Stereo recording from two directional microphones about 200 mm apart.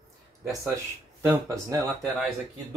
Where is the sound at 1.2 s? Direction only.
15° right (ahead or behind).